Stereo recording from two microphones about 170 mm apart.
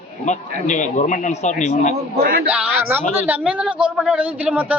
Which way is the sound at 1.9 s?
70° right (ahead or behind).